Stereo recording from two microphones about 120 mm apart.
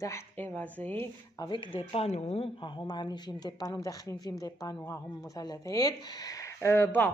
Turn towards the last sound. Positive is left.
turn(degrees=20)  # may be behind; listen again after turning